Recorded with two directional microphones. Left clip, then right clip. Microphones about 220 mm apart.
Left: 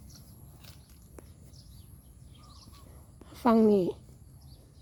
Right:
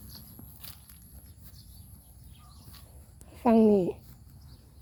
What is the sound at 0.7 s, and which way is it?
Walk, 50° right (ahead or behind).